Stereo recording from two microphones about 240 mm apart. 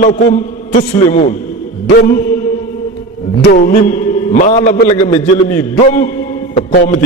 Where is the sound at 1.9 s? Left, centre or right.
Left.